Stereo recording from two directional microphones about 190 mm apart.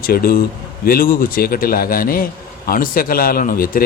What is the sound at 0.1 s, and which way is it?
A man's voice, 50° left (ahead or behind).